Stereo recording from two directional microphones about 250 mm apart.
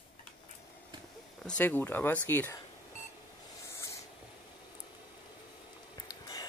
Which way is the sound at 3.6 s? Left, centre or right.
Centre.